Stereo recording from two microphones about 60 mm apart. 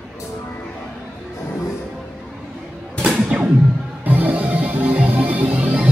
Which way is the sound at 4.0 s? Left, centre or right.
Right.